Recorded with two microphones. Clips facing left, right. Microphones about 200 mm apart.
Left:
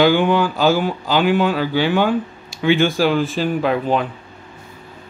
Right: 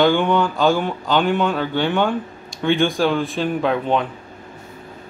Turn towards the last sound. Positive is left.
turn(degrees=5)  # may be behind; listen again after turning